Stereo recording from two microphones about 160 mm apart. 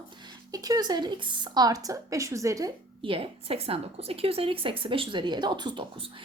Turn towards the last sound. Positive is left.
turn(degrees=-30)  # may be behind; listen again after turning